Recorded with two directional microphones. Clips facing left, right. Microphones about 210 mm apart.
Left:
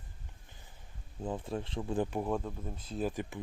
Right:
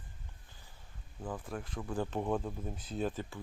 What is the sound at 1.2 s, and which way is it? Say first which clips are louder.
Speech: left 4 dB; 25° left (ahead or behind).